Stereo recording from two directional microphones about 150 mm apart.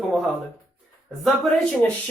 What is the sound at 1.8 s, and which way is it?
Speech, 10° left (ahead or behind).